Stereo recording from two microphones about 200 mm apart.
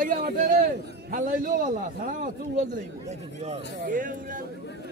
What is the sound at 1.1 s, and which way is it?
A man's voice, 45° right (ahead or behind).